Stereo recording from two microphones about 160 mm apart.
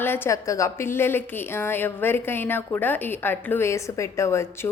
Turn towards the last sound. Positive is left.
turn(degrees=15)  # may be behind; listen again after turning